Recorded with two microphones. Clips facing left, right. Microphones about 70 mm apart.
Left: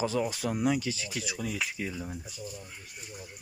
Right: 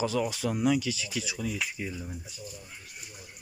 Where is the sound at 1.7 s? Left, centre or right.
Left.